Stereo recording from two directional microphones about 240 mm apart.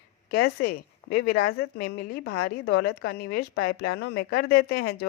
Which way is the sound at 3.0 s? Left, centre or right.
Left.